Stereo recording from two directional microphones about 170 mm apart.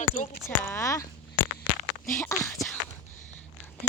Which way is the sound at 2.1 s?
20° left (ahead or behind).